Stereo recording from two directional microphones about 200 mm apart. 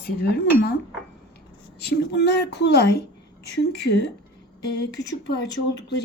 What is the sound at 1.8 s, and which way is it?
Speech, 55° left (ahead or behind).